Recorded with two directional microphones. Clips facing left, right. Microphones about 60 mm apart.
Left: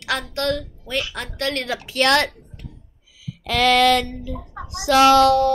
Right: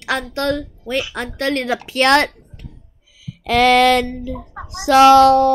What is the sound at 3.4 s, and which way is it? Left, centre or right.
A woman's voice, right.